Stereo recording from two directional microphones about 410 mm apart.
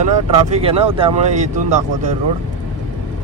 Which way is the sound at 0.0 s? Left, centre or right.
Centre.